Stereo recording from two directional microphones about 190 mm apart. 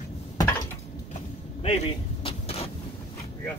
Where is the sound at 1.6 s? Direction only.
30° left (ahead or behind).